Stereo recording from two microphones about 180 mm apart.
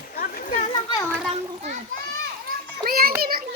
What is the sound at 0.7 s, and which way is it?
Children playing, 25° left (ahead or behind).